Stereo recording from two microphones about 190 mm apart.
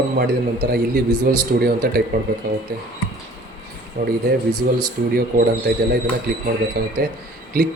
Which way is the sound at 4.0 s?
50° right (ahead or behind).